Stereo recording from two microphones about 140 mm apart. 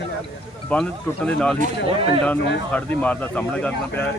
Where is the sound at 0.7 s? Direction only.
10° left (ahead or behind).